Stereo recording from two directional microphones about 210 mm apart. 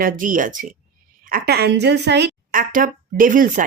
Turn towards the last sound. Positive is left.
turn(degrees=-40)  # may be behind; listen again after turning